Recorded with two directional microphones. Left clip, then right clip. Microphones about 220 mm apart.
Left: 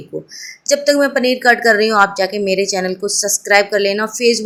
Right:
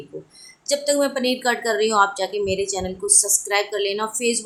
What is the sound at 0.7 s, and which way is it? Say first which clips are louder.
Speech: left 7 dB; 15° left (ahead or behind).